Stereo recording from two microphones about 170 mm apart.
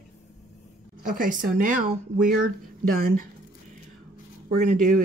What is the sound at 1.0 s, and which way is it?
Speech, 55° right (ahead or behind).